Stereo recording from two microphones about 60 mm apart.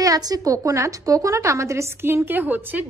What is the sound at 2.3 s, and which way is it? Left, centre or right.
Speech, right.